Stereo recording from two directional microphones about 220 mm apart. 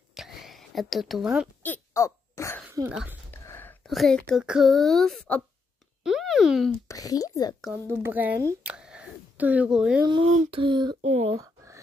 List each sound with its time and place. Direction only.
0.1 s whispering: centre (ahead or behind)
1.6 s a sound: 10° left (ahead or behind)
2.6 s speech: 10° right (ahead or behind)
3.4 s speech: 10° left (ahead or behind)
6.9 s speech: 15° left (ahead or behind)
7.6 s speech: 10° right (ahead or behind)
10.4 s speech: 25° right (ahead or behind)
11.3 s a sound: 15° right (ahead or behind)